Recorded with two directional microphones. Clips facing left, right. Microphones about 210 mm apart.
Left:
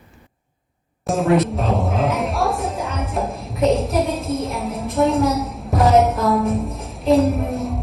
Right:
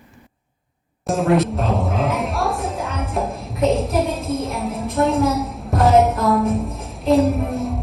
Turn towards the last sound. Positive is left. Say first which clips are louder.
# even
turn(degrees=0)  # may be behind; listen again after turning